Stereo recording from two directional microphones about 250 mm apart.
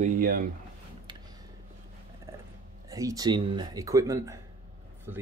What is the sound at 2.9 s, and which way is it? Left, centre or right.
A man's voice, centre.